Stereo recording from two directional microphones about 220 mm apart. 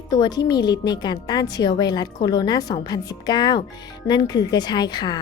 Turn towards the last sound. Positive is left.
turn(degrees=20)  # may be behind; listen again after turning